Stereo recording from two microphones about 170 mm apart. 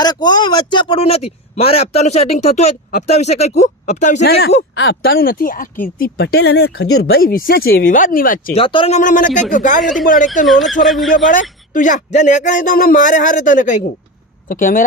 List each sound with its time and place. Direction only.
0.0 s speech: 25° left (ahead or behind); by 4.2 s 45° left (ahead or behind)
4.2 s speech: 70° left (ahead or behind); by 6.1 s 50° left (ahead or behind)
6.1 s speech: 75° left (ahead or behind); by 8.5 s 55° left (ahead or behind)
8.5 s speech: 30° left (ahead or behind)
9.0 s speech: 50° left (ahead or behind)
10.4 s speech: centre (ahead or behind)
11.7 s speech: 50° left (ahead or behind)